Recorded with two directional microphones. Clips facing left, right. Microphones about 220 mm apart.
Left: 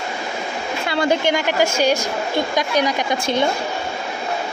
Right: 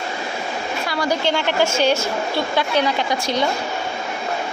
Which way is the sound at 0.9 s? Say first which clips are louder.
Left 3 dB; 25° left (ahead or behind).